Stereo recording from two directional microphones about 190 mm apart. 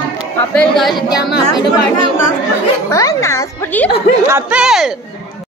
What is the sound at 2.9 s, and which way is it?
Speech, 15° left (ahead or behind).